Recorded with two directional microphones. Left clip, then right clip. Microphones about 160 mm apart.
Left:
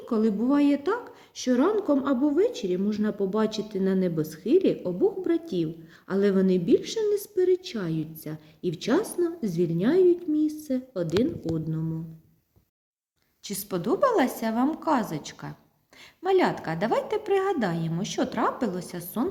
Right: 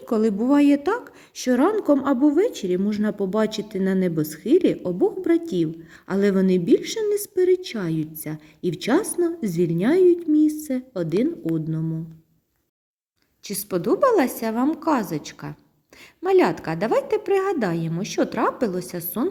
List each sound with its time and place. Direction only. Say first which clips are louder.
0.0 s a woman's voice: right 4 dB; 45° right (ahead or behind)
13.4 s a woman's voice: right 5 dB; 30° right (ahead or behind)